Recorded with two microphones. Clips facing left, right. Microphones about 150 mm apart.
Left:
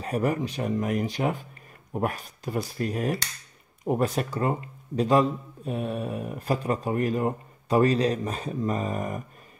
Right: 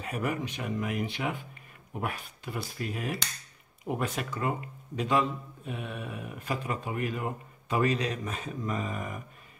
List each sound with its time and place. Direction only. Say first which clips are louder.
0.0 s speech: left 6 dB; 35° left (ahead or behind)